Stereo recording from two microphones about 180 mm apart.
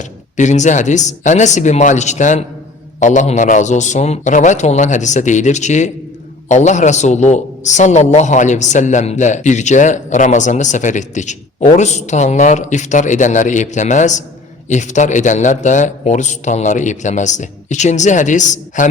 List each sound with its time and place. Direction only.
0.3 s a man's voice: 40° left (ahead or behind)